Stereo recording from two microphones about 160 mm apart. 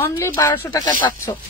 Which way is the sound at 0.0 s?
15° left (ahead or behind).